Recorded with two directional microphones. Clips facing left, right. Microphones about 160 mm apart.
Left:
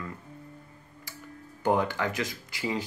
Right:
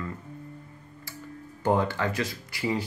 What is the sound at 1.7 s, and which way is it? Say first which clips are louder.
Speech: right 1 dB; 15° left (ahead or behind).